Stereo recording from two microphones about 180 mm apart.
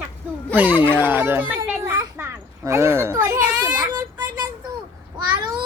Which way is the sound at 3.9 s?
20° right (ahead or behind).